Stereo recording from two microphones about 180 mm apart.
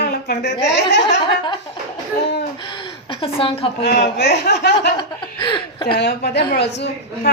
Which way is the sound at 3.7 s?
65° left (ahead or behind).